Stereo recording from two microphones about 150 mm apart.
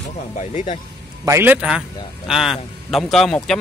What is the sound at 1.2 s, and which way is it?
A man's voice, 15° right (ahead or behind).